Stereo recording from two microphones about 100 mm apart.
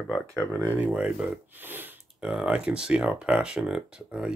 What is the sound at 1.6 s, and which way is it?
Sniff, 20° right (ahead or behind).